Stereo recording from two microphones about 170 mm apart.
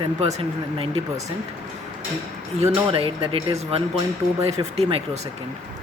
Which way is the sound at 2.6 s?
35° right (ahead or behind).